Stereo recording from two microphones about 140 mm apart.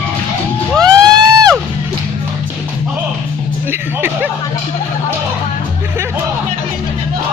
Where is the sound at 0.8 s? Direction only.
30° right (ahead or behind).